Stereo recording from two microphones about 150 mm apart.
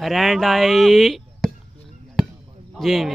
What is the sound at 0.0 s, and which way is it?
Speech, centre (ahead or behind).